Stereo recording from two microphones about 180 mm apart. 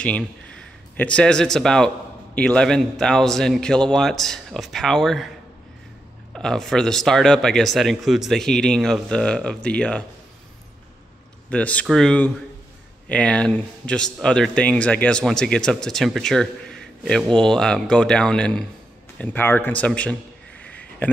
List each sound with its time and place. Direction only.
0.0 s speech: 5° left (ahead or behind)
6.3 s speech: 5° left (ahead or behind)
11.4 s a man's voice: 5° left (ahead or behind)
20.6 s a sound: 10° left (ahead or behind)